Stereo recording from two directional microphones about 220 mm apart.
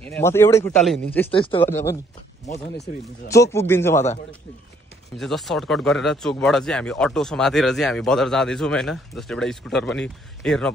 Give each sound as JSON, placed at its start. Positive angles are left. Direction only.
{"t": 0.0, "sound": "a man's voice", "side_deg": 10}
{"t": 1.3, "sound": "speech", "side_deg": 25}
{"t": 1.6, "sound": "a man's voice", "side_deg": 10}
{"t": 3.4, "sound": "a man's voice", "side_deg": 10}
{"t": 5.1, "sound": "speech", "side_deg": 0}